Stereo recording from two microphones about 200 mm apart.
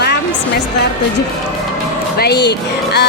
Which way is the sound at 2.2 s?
55° left (ahead or behind).